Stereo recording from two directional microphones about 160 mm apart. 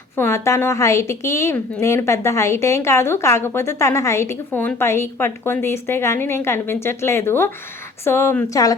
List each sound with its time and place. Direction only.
0.2 s a woman's voice: 15° left (ahead or behind)